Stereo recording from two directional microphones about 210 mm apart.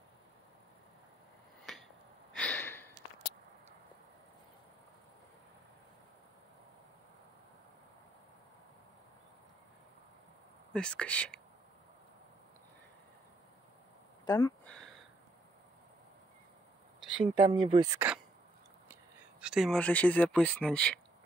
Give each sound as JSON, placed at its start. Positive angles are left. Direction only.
{"t": 1.7, "sound": "a sound", "side_deg": 0}
{"t": 10.7, "sound": "speech", "side_deg": 5}
{"t": 14.2, "sound": "speech", "side_deg": 20}
{"t": 14.6, "sound": "a sound", "side_deg": 5}
{"t": 17.5, "sound": "speech", "side_deg": -20}
{"t": 19.4, "sound": "speech", "side_deg": 0}